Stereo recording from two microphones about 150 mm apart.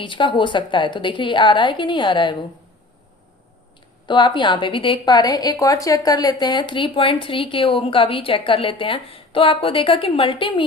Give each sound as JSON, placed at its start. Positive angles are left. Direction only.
{"t": 0.0, "sound": "a woman's voice", "side_deg": 35}
{"t": 4.0, "sound": "a woman's voice", "side_deg": 30}